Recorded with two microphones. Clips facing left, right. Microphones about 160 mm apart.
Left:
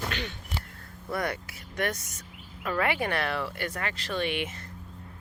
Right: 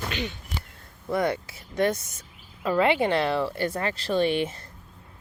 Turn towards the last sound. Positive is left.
turn(degrees=-30)  # may be behind; listen again after turning